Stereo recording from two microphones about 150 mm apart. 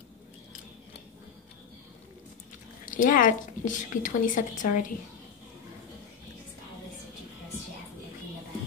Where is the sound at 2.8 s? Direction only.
60° left (ahead or behind).